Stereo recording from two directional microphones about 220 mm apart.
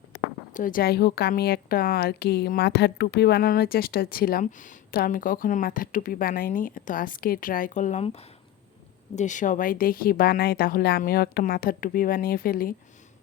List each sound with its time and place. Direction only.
0.5 s a woman's voice: 40° left (ahead or behind)